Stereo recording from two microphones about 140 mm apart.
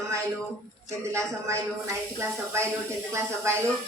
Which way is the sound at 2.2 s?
20° right (ahead or behind).